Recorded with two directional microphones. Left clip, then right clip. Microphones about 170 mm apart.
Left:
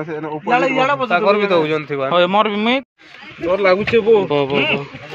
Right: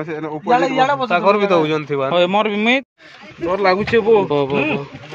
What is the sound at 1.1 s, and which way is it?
Speech, 60° right (ahead or behind).